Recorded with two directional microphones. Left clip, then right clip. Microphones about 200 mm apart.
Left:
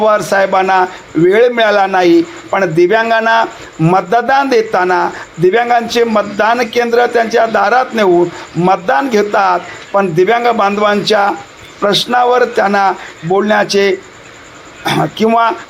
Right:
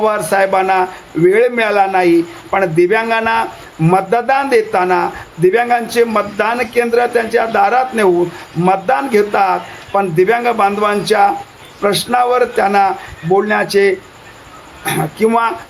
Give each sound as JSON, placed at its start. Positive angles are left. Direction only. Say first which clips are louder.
{"t": 0.0, "sound": "a man's voice", "louder": "left 3 dB", "side_deg": 10}